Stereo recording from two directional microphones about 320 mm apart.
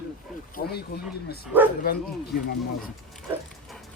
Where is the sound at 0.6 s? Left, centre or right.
Left.